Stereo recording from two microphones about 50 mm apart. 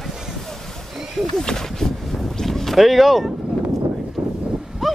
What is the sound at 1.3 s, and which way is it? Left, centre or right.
Speech, centre.